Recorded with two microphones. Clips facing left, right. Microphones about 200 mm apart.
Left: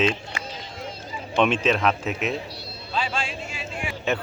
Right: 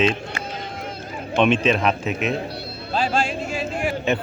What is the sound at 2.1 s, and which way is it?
Music, 55° right (ahead or behind).